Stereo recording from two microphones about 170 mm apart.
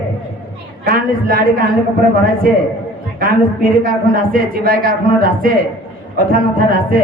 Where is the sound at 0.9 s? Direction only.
60° right (ahead or behind).